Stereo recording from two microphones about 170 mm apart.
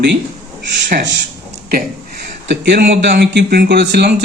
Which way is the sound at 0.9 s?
65° right (ahead or behind).